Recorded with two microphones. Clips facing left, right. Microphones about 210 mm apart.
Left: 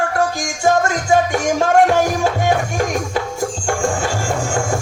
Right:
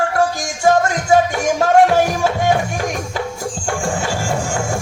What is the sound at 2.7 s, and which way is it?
Music, 45° left (ahead or behind).